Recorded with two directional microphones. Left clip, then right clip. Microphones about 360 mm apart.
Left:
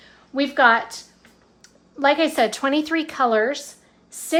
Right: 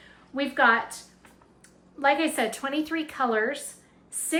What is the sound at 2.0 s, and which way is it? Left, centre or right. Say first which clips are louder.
A woman's voice: left 6 dB; centre.